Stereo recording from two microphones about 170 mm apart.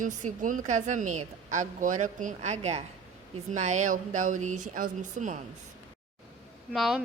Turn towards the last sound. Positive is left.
turn(degrees=0)  # may be behind; listen again after turning